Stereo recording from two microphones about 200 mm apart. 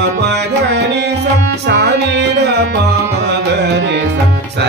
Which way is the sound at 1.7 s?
60° right (ahead or behind).